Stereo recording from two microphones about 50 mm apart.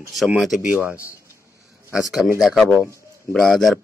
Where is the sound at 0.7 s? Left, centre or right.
Right.